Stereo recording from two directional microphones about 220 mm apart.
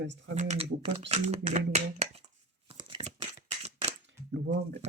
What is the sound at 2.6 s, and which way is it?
Tearing, 25° right (ahead or behind).